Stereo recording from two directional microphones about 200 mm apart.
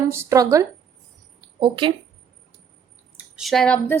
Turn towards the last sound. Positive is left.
turn(degrees=5)  # may be behind; listen again after turning